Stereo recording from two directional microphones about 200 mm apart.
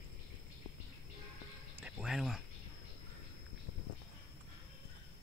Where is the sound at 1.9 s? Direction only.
5° right (ahead or behind).